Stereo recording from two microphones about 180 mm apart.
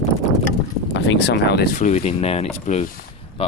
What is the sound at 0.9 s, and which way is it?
Speech, 75° left (ahead or behind).